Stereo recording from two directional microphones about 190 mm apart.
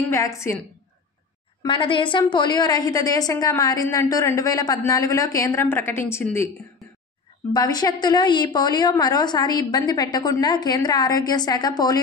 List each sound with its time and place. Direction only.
0.1 s a woman's voice: 15° left (ahead or behind)
1.6 s a woman's voice: 25° left (ahead or behind)
7.5 s a woman's voice: 20° left (ahead or behind)